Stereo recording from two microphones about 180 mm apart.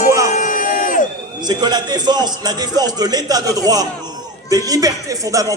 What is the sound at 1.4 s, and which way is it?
A man's voice, 25° right (ahead or behind).